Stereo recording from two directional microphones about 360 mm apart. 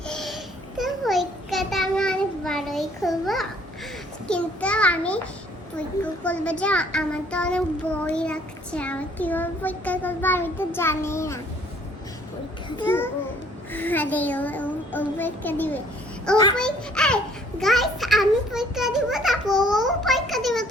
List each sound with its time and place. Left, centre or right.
0.1 s babbling: centre
0.8 s a sound: centre
6.2 s a child's voice: centre
12.7 s a child's voice: centre